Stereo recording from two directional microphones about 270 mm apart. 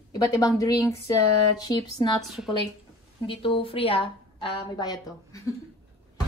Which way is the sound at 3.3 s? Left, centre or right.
Centre.